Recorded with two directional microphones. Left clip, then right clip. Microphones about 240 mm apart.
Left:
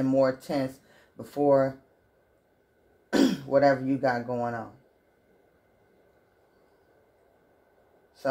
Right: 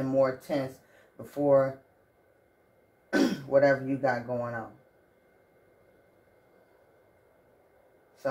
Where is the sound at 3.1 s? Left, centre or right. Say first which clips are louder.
Left 1 dB; left.